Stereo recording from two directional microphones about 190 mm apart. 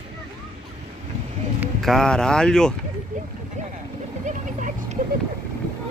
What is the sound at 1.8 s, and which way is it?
Speech, centre (ahead or behind).